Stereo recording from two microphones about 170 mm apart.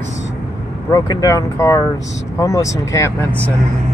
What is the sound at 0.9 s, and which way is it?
Speech, 20° left (ahead or behind).